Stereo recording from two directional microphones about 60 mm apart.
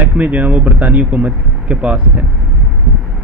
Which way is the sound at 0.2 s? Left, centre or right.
Right.